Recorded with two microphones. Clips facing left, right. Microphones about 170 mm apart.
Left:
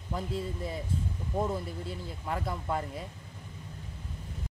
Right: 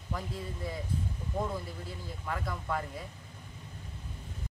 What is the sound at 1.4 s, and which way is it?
Speech, 25° left (ahead or behind).